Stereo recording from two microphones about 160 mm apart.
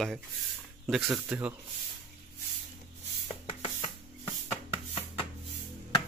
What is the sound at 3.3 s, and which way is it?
Rub, 35° left (ahead or behind).